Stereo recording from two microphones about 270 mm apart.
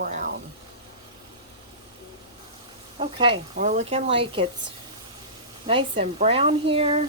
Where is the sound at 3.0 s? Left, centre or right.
Centre.